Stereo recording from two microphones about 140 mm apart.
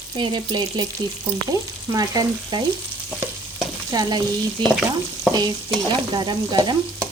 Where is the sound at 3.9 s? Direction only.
30° right (ahead or behind).